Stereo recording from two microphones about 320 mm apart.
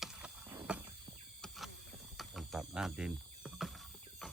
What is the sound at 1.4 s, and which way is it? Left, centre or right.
Vehicle, centre.